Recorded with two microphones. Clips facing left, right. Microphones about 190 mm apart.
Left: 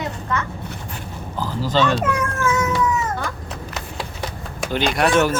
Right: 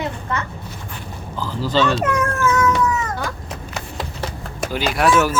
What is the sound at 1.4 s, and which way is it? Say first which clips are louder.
Speech: even; 45° left (ahead or behind).